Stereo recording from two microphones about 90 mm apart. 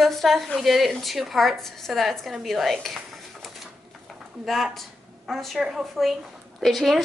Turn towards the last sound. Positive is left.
turn(degrees=0)  # may be behind; listen again after turning